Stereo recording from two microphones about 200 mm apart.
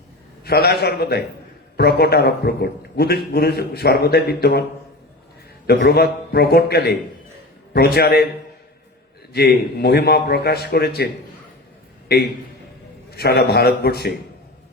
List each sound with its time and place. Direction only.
0.4 s a man's voice: 55° left (ahead or behind)
5.6 s a man's voice: 55° left (ahead or behind)
9.3 s a man's voice: 55° left (ahead or behind)